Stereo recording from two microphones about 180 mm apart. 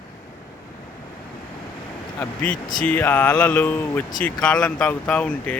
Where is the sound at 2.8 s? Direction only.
10° left (ahead or behind).